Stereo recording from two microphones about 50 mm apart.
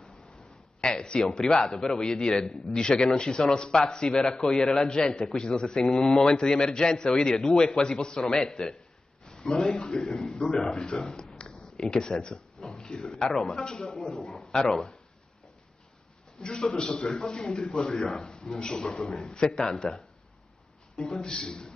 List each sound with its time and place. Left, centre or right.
0.7 s speech: centre
8.7 s a sound: centre
10.0 s speech: centre
16.3 s a man's voice: centre
21.0 s speech: centre